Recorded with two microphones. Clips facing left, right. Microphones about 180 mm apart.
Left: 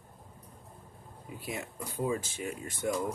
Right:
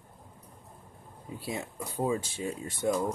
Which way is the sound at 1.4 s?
25° right (ahead or behind).